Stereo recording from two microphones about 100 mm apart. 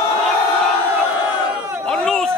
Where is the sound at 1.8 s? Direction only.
5° left (ahead or behind).